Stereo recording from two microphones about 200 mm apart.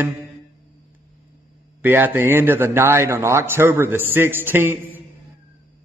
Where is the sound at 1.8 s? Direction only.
10° right (ahead or behind).